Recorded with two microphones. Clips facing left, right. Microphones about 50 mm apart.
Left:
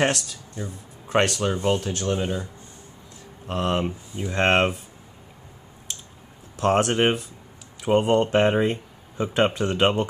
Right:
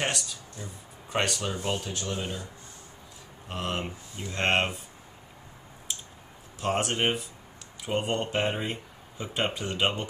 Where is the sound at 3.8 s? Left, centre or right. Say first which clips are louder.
Left 8 dB; centre.